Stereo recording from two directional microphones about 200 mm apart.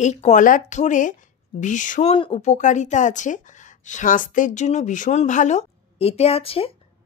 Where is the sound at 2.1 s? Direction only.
30° left (ahead or behind).